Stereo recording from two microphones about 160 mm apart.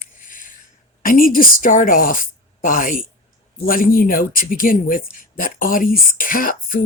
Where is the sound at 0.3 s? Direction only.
55° left (ahead or behind).